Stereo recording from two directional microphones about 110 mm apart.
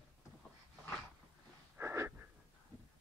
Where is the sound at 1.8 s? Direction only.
25° right (ahead or behind).